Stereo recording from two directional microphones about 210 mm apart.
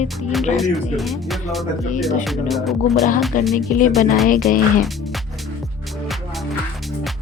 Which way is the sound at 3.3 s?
40° left (ahead or behind).